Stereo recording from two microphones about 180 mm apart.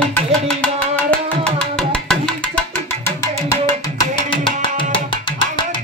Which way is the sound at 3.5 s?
25° left (ahead or behind).